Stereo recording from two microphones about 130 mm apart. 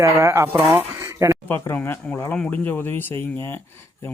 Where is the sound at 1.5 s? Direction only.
15° left (ahead or behind).